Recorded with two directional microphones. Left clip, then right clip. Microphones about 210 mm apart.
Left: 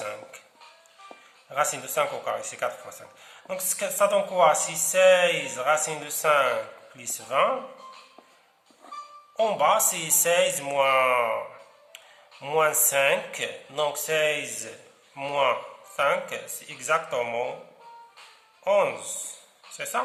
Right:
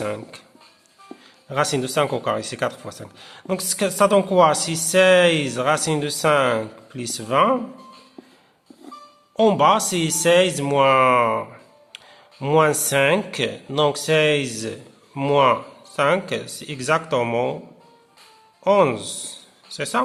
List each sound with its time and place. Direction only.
0.0 s a sound: 45° right (ahead or behind)
1.5 s speech: 50° right (ahead or behind)
3.8 s speech: 60° right (ahead or behind)
4.1 s speech: 40° right (ahead or behind)
5.1 s speech: 60° right (ahead or behind)
5.5 s speech: 40° right (ahead or behind)
9.4 s speech: 40° right (ahead or behind)
12.4 s speech: 45° right (ahead or behind)
16.3 s speech: 60° right (ahead or behind)
18.6 s speech: 40° right (ahead or behind)